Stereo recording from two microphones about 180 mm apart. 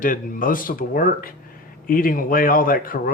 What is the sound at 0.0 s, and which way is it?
A man's voice, 50° left (ahead or behind).